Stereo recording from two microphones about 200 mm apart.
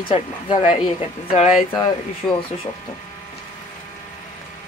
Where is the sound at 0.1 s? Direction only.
25° left (ahead or behind).